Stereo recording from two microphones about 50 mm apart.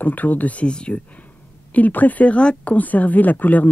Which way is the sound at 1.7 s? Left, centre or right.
Left.